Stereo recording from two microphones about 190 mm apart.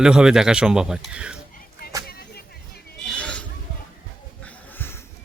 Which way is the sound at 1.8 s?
50° left (ahead or behind).